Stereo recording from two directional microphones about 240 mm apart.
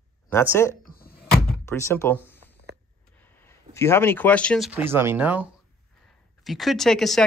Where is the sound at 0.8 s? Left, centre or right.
Left.